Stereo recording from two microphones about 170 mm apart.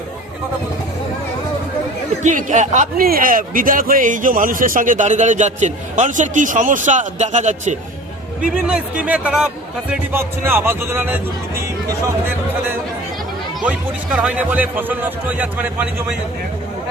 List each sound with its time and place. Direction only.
2.2 s a man's voice: 45° right (ahead or behind)
8.5 s speech: 10° right (ahead or behind)
13.7 s speech: 5° right (ahead or behind)